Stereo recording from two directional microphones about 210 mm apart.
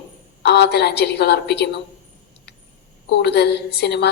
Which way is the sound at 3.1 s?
55° left (ahead or behind).